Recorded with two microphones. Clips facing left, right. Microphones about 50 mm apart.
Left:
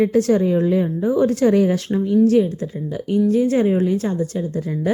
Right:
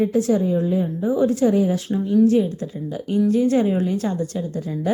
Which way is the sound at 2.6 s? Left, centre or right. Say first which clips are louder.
Left 2 dB; left.